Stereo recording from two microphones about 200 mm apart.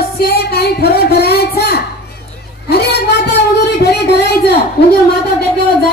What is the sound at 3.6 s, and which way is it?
Music, 55° left (ahead or behind).